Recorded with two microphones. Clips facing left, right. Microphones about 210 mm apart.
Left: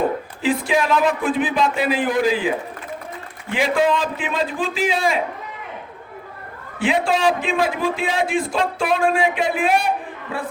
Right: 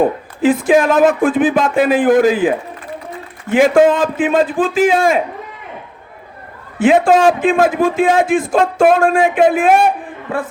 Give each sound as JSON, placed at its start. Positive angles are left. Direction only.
{"t": 0.0, "sound": "a man's voice", "side_deg": -50}
{"t": 3.5, "sound": "a man's voice", "side_deg": -50}
{"t": 6.7, "sound": "a man's voice", "side_deg": -50}